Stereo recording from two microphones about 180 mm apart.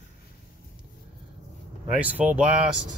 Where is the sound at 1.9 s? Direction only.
10° right (ahead or behind).